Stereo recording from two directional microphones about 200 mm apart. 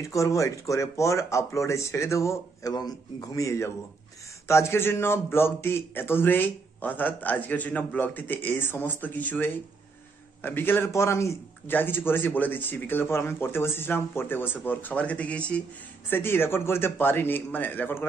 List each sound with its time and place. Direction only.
0.0 s a man's voice: 15° left (ahead or behind)